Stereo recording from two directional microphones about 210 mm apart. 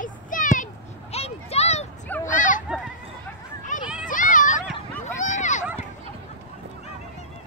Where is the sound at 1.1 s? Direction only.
30° left (ahead or behind).